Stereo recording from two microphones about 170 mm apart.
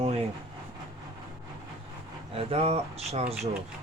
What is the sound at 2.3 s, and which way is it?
Speech, 35° right (ahead or behind).